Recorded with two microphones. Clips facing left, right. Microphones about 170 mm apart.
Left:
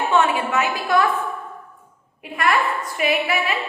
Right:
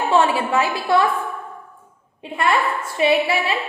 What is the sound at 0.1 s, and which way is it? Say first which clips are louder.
Speech: right 3 dB; 30° right (ahead or behind).